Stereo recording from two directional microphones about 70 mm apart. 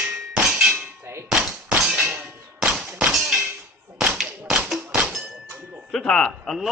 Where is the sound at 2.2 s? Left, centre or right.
Centre.